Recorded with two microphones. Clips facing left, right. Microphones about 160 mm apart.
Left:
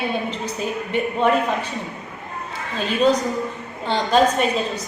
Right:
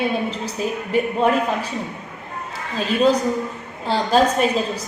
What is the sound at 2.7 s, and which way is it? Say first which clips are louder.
Speech: right 1 dB; centre (ahead or behind).